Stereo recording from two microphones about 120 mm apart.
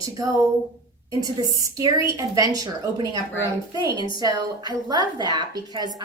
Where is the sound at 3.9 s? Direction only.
40° left (ahead or behind).